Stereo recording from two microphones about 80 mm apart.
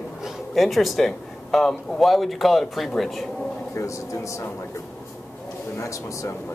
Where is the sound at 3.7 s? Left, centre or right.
Left.